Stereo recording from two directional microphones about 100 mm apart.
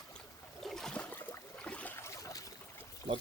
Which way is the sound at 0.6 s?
5° left (ahead or behind).